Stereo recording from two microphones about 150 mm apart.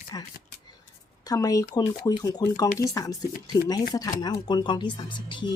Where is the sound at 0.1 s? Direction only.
25° left (ahead or behind).